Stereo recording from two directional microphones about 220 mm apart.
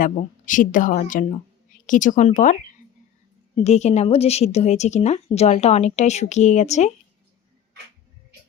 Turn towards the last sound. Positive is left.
turn(degrees=30)  # may be behind; listen again after turning